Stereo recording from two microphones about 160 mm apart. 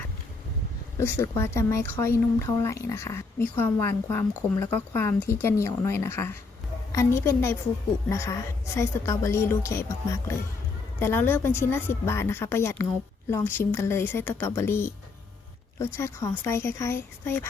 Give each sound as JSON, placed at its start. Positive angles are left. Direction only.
{"t": 0.9, "sound": "a woman's voice", "side_deg": 15}